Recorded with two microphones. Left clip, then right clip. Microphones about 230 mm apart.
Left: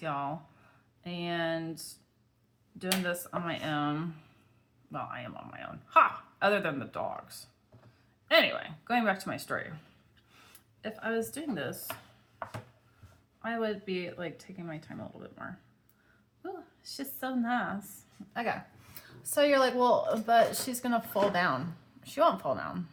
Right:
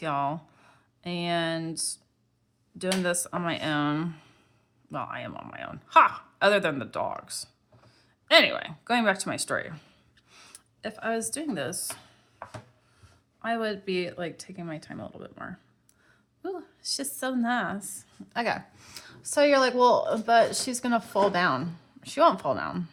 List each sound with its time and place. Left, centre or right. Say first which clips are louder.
0.0 s speech: right 6 dB; right
13.4 s a woman's voice: right 4 dB; right